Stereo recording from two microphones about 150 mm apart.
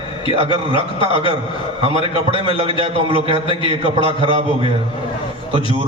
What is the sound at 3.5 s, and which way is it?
Speech, 35° left (ahead or behind).